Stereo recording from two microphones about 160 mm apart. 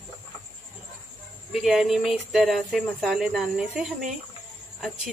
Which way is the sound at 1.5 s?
Centre (ahead or behind).